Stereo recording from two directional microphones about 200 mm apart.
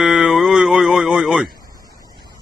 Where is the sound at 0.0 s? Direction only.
Centre (ahead or behind).